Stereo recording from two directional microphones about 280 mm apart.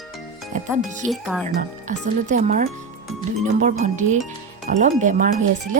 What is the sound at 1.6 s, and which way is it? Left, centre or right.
Speech, right.